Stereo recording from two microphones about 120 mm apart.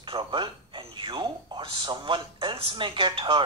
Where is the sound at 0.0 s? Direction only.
45° right (ahead or behind).